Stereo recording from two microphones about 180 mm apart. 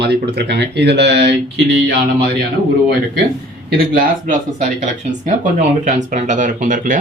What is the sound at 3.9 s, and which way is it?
Speech, 50° right (ahead or behind).